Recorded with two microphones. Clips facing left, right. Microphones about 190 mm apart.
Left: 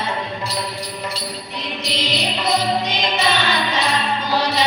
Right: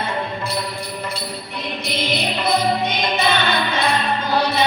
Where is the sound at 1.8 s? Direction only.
55° right (ahead or behind).